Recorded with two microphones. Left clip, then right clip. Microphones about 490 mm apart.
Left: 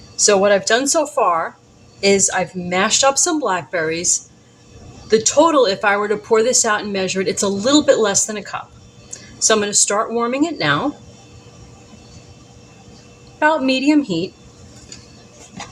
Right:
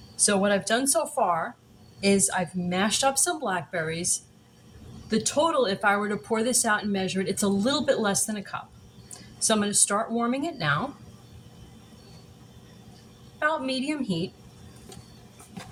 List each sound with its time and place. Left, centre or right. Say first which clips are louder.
0.2 s speech: left 11 dB; right
13.4 s speech: left 11 dB; right